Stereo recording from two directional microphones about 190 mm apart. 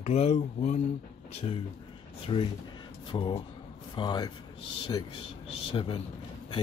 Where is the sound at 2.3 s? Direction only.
30° left (ahead or behind).